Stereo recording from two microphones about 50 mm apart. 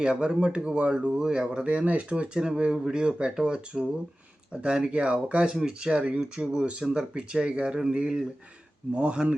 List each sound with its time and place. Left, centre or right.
0.0 s speech: centre
5.5 s speech: centre
5.9 s speech: right